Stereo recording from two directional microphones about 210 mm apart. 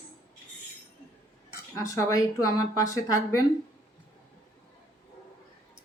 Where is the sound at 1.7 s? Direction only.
15° left (ahead or behind).